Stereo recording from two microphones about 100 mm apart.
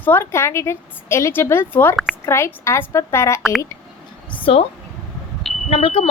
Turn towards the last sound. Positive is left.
turn(degrees=75)  # may be behind; listen again after turning